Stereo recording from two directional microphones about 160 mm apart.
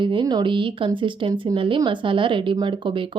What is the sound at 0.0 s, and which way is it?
Speech, 30° right (ahead or behind).